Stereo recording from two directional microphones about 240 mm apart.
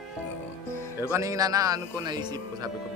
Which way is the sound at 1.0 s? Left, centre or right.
Centre.